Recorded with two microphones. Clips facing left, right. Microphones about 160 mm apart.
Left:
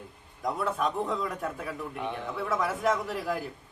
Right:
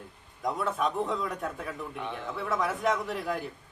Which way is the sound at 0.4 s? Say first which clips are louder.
Even; centre (ahead or behind).